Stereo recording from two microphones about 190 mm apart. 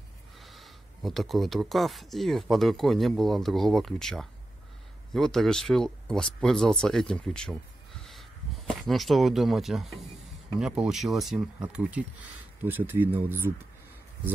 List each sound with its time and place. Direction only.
0.4 s speech: centre (ahead or behind)